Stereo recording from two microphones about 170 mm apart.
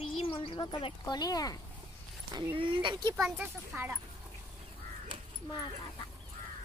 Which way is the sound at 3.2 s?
5° right (ahead or behind).